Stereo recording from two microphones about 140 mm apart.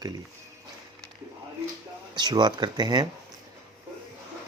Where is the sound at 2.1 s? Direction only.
30° right (ahead or behind).